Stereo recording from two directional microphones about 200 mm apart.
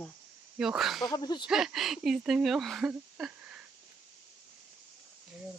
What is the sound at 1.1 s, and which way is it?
Speech, 20° left (ahead or behind).